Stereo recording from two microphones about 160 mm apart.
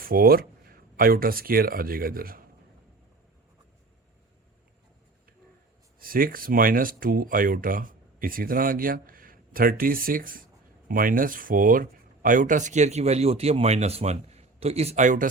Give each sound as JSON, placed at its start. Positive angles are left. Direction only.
{"t": 0.0, "sound": "speech", "side_deg": -70}
{"t": 6.0, "sound": "speech", "side_deg": -60}